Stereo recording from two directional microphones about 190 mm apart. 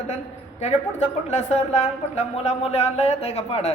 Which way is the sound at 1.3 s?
35° left (ahead or behind).